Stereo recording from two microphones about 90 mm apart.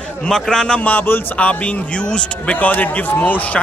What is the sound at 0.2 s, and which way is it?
A man's voice, 5° left (ahead or behind).